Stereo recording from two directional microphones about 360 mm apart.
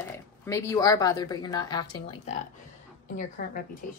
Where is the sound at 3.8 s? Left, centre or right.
Left.